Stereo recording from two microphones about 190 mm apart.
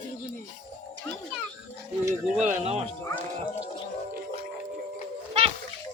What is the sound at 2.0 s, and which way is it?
Speech, 10° right (ahead or behind).